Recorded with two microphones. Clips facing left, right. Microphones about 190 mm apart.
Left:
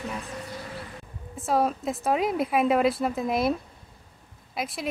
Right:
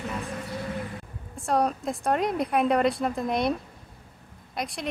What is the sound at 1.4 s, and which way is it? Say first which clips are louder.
A woman's voice: even; 5° left (ahead or behind).